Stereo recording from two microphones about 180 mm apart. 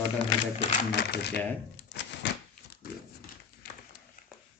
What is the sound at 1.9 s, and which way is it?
Door, 80° left.